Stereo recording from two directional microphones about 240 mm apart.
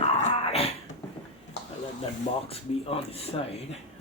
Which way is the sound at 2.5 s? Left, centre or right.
Left.